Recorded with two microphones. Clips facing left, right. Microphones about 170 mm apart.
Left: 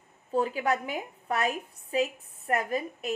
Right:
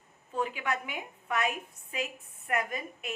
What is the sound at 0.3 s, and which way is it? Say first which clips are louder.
A woman's voice: left 6 dB; 35° left (ahead or behind).